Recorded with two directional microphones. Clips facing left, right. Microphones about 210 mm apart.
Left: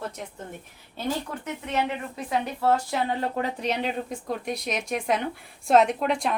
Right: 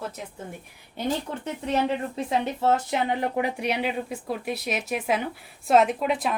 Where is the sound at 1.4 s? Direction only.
30° right (ahead or behind); by 6.3 s 5° right (ahead or behind).